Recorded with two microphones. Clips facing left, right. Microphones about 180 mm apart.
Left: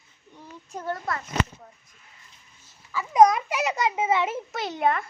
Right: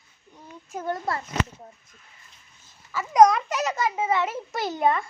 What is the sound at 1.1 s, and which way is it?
Speech, 30° right (ahead or behind).